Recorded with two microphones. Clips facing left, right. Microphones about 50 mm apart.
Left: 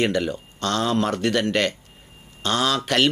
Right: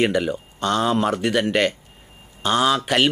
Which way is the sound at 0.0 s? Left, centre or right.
Centre.